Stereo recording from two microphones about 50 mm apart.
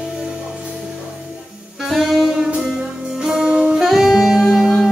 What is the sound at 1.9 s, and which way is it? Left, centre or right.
Saxophone, centre.